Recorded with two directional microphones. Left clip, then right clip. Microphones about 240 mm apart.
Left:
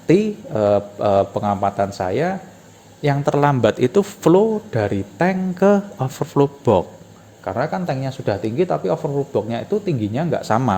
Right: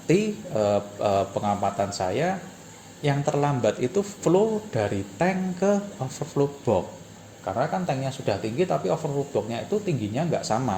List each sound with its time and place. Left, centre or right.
0.1 s speech: left